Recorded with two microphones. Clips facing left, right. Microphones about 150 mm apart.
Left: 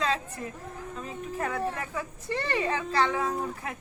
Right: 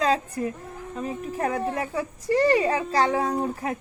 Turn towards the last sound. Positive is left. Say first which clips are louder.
# right 5 dB
turn(degrees=-35)  # may be behind; listen again after turning